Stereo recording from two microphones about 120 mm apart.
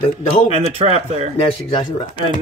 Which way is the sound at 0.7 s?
60° right (ahead or behind).